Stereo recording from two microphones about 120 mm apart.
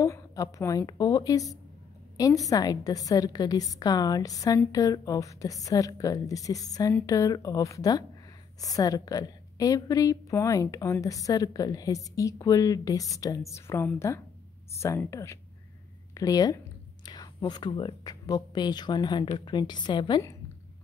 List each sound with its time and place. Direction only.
0.0 s a woman's voice: 25° left (ahead or behind)